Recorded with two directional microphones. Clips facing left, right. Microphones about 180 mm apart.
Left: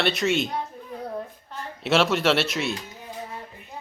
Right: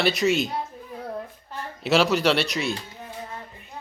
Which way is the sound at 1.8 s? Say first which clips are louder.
Right 1 dB; centre (ahead or behind).